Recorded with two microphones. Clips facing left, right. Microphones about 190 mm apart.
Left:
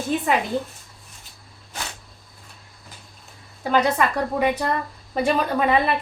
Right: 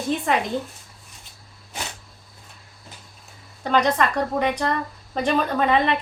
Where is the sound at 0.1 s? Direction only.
Centre (ahead or behind).